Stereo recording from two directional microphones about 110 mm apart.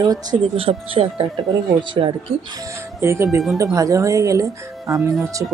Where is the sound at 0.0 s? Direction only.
35° right (ahead or behind).